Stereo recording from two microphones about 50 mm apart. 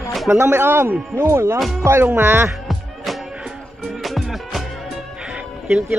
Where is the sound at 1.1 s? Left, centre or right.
Right.